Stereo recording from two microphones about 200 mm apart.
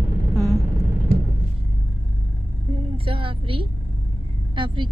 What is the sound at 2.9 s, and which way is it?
A woman's voice, 25° right (ahead or behind).